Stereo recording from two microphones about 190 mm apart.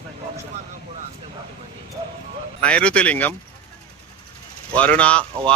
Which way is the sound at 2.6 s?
5° left (ahead or behind).